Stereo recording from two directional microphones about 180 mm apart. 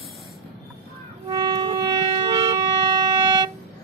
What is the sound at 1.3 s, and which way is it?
Music, 20° right (ahead or behind).